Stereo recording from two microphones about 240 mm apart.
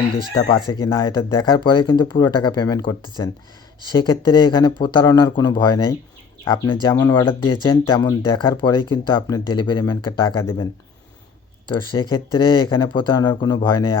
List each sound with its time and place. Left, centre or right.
0.7 s speech: centre
11.7 s speech: centre